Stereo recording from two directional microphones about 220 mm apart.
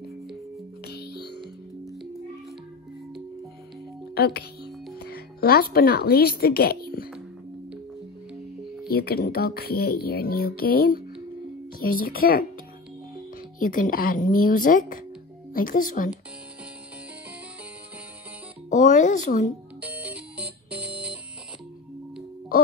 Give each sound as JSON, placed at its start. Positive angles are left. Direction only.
{"t": 0.8, "sound": "music", "side_deg": 45}
{"t": 4.1, "sound": "music", "side_deg": 45}
{"t": 4.9, "sound": "speech", "side_deg": 45}
{"t": 8.8, "sound": "speech", "side_deg": 45}
{"t": 13.6, "sound": "speech", "side_deg": 40}
{"t": 18.7, "sound": "music", "side_deg": 35}
{"t": 19.8, "sound": "music", "side_deg": -5}